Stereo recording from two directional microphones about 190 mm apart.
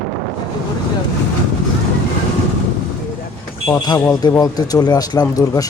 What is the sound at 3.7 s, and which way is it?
Speech, 20° left (ahead or behind).